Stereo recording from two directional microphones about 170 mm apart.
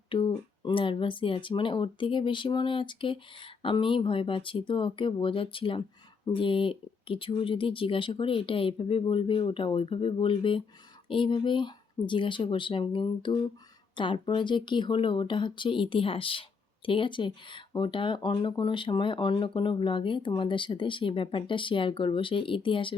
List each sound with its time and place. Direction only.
0.1 s speech: 30° left (ahead or behind)